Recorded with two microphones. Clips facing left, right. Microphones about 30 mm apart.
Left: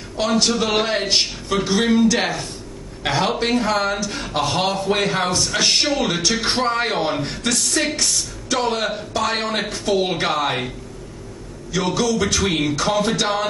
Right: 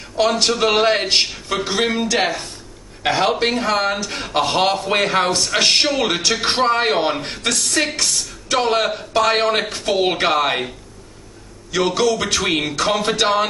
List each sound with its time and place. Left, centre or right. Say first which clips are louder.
0.2 s a man's voice: right 2 dB; right
2.1 s speech: right 2 dB; centre; by 4.4 s right
4.4 s a man's voice: right 3 dB; right
5.6 s a man's voice: right 3 dB; right
7.2 s a man's voice: right 1 dB; right
11.7 s a man's voice: right 3 dB; right